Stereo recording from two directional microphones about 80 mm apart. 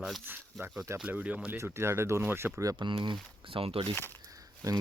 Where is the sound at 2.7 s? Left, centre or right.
Right.